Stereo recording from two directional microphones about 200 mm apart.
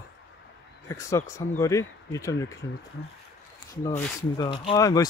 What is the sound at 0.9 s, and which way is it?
Speech, 15° left (ahead or behind).